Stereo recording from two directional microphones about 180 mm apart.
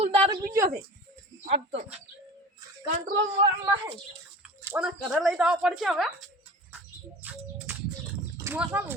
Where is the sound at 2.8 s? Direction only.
50° right (ahead or behind).